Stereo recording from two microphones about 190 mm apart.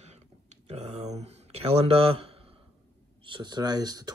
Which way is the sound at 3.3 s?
25° right (ahead or behind).